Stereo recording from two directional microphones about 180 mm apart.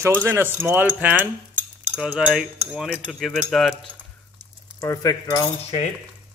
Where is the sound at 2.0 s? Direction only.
5° right (ahead or behind).